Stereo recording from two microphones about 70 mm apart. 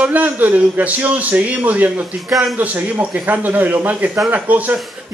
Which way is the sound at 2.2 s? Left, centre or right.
Centre.